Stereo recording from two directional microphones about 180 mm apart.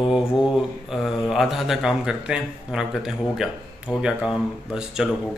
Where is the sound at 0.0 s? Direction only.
5° right (ahead or behind).